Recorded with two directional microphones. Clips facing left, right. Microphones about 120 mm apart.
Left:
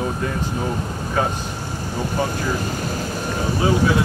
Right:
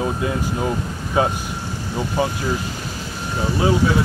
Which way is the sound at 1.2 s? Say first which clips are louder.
Right 3 dB; 10° right (ahead or behind).